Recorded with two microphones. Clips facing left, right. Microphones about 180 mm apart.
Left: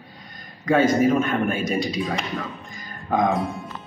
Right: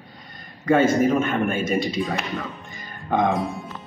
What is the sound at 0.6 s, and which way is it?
A man's voice, centre (ahead or behind).